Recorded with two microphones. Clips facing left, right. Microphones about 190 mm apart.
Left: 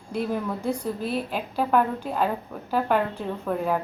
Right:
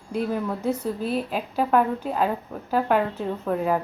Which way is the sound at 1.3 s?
5° right (ahead or behind).